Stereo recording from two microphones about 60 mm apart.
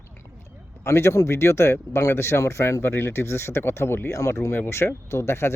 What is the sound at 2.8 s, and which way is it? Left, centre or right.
Speech, left.